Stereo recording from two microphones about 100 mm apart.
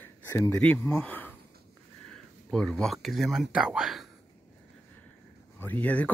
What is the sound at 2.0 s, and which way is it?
Speech, 10° left (ahead or behind).